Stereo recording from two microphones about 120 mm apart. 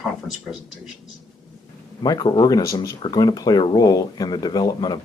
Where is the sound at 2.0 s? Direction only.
35° left (ahead or behind).